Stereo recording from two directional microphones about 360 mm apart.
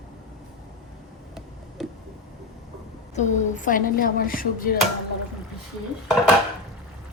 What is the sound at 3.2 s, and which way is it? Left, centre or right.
Speech, left.